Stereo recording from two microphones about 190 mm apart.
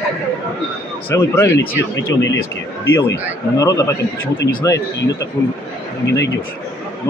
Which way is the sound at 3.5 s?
15° left (ahead or behind).